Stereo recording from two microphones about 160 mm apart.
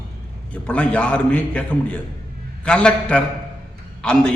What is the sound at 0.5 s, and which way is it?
A man's voice, 5° left (ahead or behind).